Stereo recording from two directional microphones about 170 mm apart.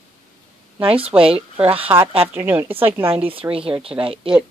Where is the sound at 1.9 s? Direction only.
20° right (ahead or behind).